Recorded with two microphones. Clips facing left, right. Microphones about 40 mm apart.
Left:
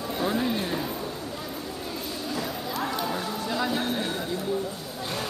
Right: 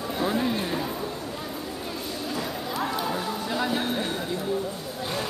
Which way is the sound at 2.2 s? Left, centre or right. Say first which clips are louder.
Even; centre.